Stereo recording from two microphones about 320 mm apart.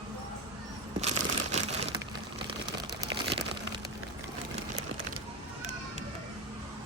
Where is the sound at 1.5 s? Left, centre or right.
Right.